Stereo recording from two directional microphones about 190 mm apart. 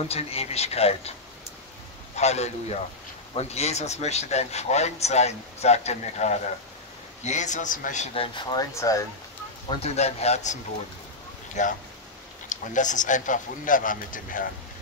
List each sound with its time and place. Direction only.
0.1 s speech: 30° left (ahead or behind)
2.1 s speech: 35° left (ahead or behind); by 9.0 s 15° left (ahead or behind)
9.7 s speech: 35° left (ahead or behind)